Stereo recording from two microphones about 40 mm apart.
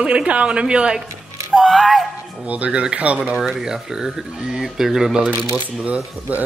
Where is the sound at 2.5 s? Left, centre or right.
Right.